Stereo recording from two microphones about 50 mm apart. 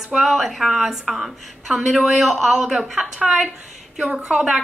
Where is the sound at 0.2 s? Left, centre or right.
Centre.